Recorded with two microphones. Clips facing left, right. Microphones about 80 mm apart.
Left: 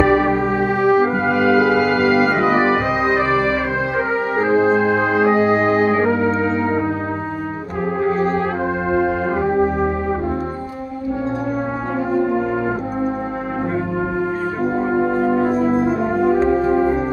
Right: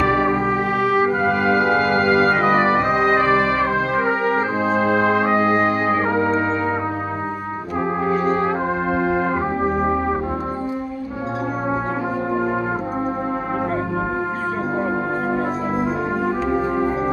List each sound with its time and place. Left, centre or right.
1.4 s music: right